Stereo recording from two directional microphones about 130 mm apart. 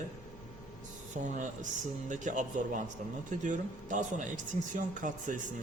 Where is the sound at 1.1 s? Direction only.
75° right (ahead or behind).